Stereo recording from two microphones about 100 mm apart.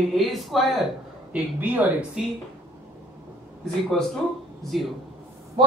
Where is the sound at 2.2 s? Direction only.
5° right (ahead or behind).